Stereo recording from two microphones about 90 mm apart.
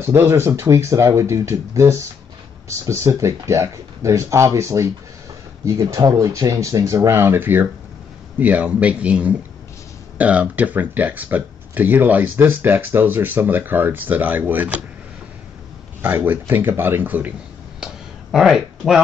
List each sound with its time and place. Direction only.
0.0 s a man's voice: 30° right (ahead or behind)
16.0 s speech: 20° right (ahead or behind)
18.3 s speech: 5° right (ahead or behind)